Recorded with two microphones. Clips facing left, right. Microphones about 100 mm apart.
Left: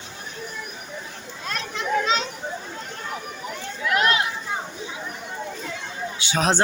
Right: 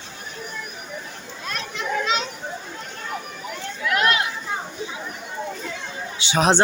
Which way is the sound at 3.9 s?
30° left (ahead or behind).